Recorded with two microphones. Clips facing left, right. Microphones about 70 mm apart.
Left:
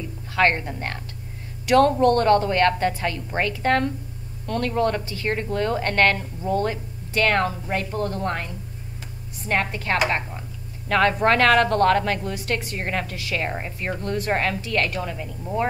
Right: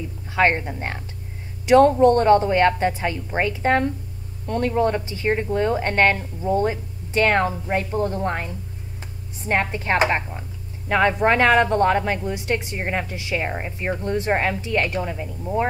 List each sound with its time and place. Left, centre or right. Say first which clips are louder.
0.4 s a woman's voice: right 1 dB; centre